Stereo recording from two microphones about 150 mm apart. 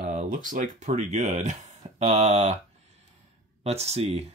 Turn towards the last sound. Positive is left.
turn(degrees=-40)  # may be behind; listen again after turning